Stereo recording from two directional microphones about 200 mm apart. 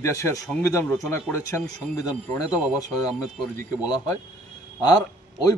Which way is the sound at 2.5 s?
5° right (ahead or behind).